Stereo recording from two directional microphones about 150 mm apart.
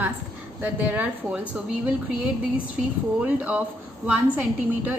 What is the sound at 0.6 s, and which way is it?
A woman's voice, 10° right (ahead or behind).